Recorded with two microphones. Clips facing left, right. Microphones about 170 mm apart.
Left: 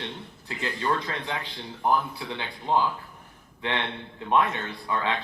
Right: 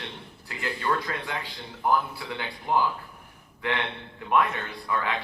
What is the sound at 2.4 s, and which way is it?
Speech, 20° left (ahead or behind).